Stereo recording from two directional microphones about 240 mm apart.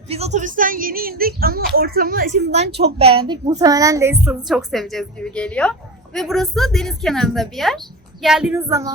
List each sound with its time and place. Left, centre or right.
0.1 s a woman's voice: right; by 4.2 s centre
4.2 s a woman's voice: centre